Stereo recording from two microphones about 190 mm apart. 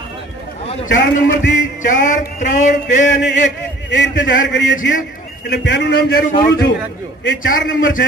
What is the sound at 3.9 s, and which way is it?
A man's voice, 65° left (ahead or behind).